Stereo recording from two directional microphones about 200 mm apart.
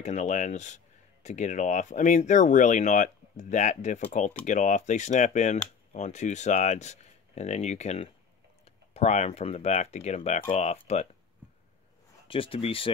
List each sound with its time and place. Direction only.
0.0 s speech: 35° left (ahead or behind)
12.3 s speech: 30° left (ahead or behind)